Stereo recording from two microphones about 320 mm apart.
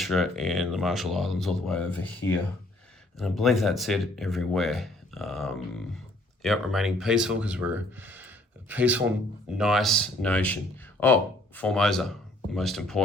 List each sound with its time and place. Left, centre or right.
0.0 s speech: centre